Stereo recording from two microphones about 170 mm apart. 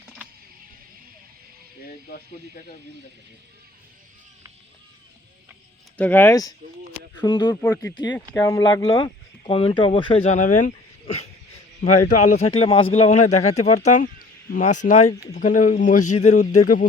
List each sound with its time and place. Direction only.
1.9 s music: 60° left (ahead or behind)
6.0 s speech: 10° left (ahead or behind)
7.5 s a man's voice: 15° left (ahead or behind); by 16.8 s 50° left (ahead or behind)